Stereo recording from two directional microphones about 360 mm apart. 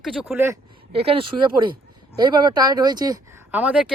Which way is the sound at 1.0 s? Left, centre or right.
Centre.